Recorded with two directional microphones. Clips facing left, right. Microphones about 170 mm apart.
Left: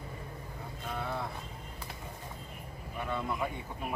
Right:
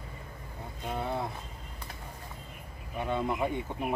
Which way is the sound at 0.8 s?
20° right (ahead or behind).